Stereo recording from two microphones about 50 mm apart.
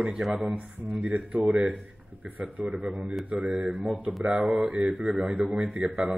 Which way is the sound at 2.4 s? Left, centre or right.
Centre.